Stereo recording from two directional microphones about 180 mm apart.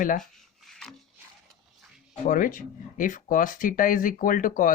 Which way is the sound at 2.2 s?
45° left (ahead or behind).